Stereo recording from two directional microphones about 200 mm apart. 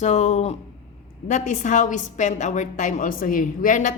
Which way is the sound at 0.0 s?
35° left (ahead or behind).